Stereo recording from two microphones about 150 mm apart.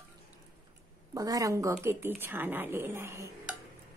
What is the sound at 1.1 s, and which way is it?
A woman's voice, 25° right (ahead or behind).